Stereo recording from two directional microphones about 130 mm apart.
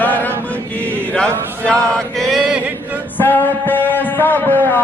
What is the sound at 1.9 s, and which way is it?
Mantra, centre (ahead or behind).